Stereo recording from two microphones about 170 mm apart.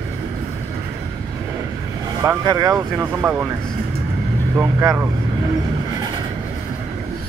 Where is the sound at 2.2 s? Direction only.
20° right (ahead or behind).